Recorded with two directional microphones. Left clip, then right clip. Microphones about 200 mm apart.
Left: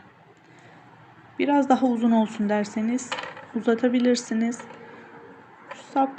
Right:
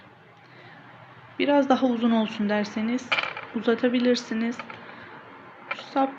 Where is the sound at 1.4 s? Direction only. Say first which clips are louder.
Even; 25° left (ahead or behind).